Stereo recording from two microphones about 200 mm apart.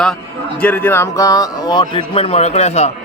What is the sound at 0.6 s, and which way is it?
A man's voice, 10° left (ahead or behind).